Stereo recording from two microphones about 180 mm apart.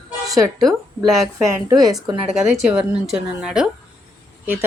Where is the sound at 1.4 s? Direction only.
20° right (ahead or behind).